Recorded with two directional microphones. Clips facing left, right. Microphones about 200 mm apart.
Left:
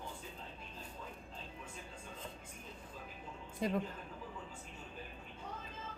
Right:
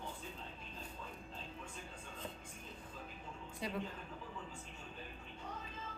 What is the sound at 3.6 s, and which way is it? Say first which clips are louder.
Speech: left 7 dB; 50° left (ahead or behind).